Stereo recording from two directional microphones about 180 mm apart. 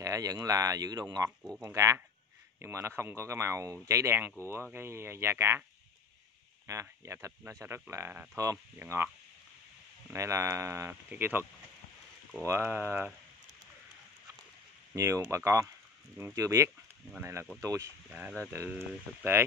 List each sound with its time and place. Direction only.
0.0 s speech: 20° right (ahead or behind)
6.7 s speech: 15° right (ahead or behind)
10.1 s speech: 15° right (ahead or behind)
12.4 s speech: 15° right (ahead or behind)
15.0 s speech: 15° right (ahead or behind)